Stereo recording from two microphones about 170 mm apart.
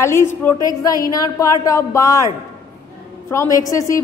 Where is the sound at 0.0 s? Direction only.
15° left (ahead or behind).